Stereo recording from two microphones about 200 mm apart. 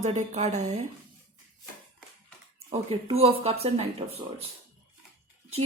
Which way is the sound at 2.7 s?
30° right (ahead or behind).